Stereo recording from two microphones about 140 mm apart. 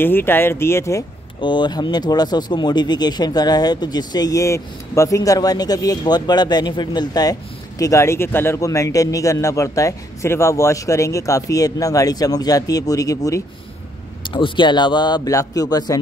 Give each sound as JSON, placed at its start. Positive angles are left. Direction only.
{"t": 0.0, "sound": "speech", "side_deg": 15}
{"t": 1.4, "sound": "speech", "side_deg": 35}
{"t": 14.2, "sound": "a man's voice", "side_deg": 35}